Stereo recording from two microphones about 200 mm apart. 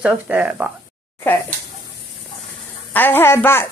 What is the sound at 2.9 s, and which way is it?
Speech, 10° left (ahead or behind).